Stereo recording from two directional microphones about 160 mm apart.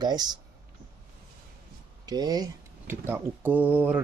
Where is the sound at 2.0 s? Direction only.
25° right (ahead or behind).